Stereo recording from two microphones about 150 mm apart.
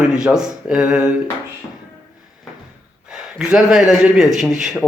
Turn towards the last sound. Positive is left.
turn(degrees=-5)  # may be behind; listen again after turning